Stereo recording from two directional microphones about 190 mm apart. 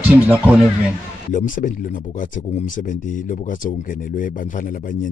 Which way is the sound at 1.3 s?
45° left (ahead or behind).